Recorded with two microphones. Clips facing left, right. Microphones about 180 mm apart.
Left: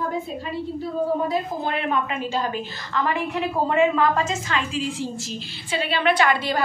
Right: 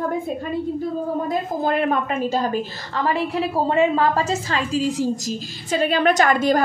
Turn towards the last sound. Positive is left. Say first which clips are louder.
# right 4 dB
turn(degrees=-45)  # may be behind; listen again after turning